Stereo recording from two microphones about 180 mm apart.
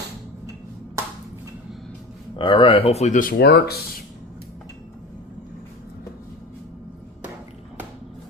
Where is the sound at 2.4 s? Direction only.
30° left (ahead or behind); by 4.0 s 60° left (ahead or behind).